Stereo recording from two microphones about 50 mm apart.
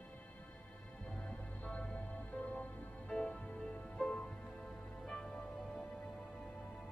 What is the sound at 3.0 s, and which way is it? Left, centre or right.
Music, centre.